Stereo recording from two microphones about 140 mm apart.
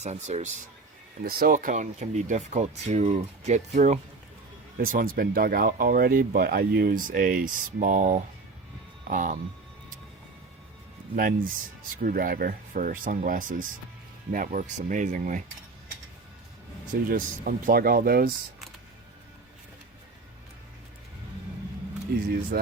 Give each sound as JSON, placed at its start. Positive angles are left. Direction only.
{"t": 0.0, "sound": "speech", "side_deg": -55}
{"t": 1.2, "sound": "speech", "side_deg": -90}
{"t": 4.9, "sound": "speech", "side_deg": -90}
{"t": 11.1, "sound": "speech", "side_deg": -85}
{"t": 17.1, "sound": "speech", "side_deg": -90}
{"t": 22.1, "sound": "speech", "side_deg": -90}